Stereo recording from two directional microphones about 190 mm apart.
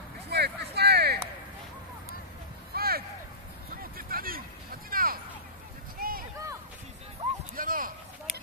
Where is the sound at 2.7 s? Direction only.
55° right (ahead or behind).